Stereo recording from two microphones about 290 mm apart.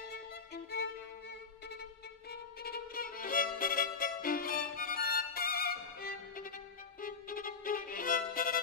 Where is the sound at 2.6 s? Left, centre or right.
Left.